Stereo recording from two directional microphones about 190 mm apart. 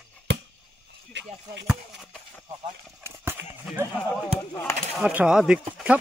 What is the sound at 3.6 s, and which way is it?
Speech, 10° right (ahead or behind).